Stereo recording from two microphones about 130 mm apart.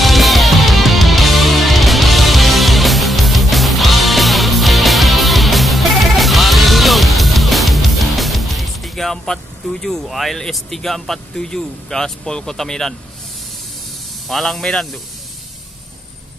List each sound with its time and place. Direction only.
0.0 s music: centre (ahead or behind)
14.2 s a man's voice: centre (ahead or behind)